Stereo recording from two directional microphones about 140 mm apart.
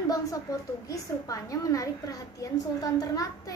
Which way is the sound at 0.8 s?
25° left (ahead or behind).